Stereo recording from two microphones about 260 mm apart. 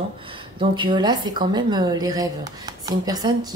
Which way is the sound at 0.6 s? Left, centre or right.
Centre.